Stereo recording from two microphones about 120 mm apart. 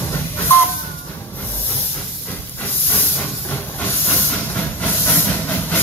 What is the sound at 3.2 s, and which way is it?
Hiss, 15° left (ahead or behind).